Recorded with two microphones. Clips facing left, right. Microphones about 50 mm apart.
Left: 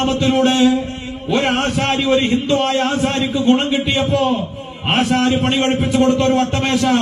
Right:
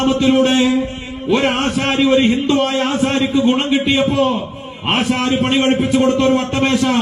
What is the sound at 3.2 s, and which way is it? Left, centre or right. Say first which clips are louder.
Speech: left 1 dB; right.